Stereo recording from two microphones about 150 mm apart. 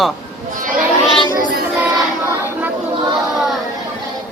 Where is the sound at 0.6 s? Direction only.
65° right (ahead or behind).